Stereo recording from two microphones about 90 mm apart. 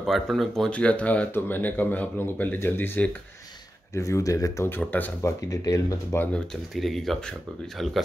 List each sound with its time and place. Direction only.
0.0 s speech: centre (ahead or behind)
0.7 s speech: 15° left (ahead or behind)
3.9 s speech: 35° left (ahead or behind)
4.6 s speech: 20° left (ahead or behind)
5.2 s speech: 40° left (ahead or behind)
6.7 s speech: centre (ahead or behind)